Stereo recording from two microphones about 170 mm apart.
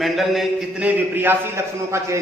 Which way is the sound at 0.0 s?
Centre (ahead or behind).